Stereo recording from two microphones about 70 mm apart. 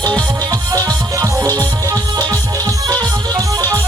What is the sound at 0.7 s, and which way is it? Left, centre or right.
Music, right.